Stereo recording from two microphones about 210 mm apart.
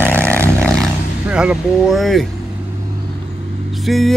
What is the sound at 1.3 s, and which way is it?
Speech, 5° right (ahead or behind).